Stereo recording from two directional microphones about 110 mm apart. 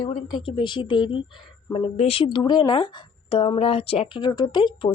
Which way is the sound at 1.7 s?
60° left (ahead or behind).